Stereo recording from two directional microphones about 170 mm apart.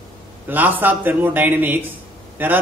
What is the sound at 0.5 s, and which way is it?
Speech, 10° right (ahead or behind).